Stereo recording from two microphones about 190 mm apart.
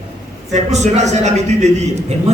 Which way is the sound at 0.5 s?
35° right (ahead or behind).